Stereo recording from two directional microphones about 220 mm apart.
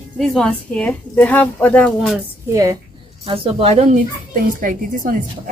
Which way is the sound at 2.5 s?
15° right (ahead or behind).